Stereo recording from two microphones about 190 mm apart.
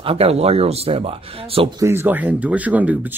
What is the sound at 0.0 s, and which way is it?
Speech, 30° right (ahead or behind).